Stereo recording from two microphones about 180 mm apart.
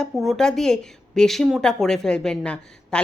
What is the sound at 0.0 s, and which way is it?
Speech, centre (ahead or behind).